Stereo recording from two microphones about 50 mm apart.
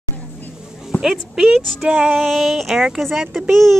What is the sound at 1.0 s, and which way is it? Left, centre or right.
Speech, centre.